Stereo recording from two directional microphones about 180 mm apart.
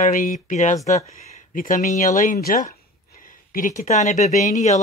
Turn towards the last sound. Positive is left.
turn(degrees=40)  # may be behind; listen again after turning